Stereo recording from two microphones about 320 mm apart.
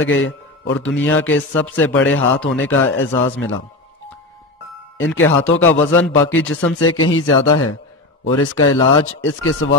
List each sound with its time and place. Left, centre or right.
0.0 s a man's voice: left
4.9 s a man's voice: left